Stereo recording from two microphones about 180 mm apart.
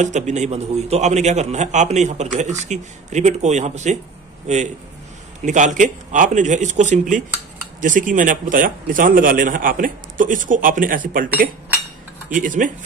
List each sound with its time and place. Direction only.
0.0 s a man's voice: 40° right (ahead or behind)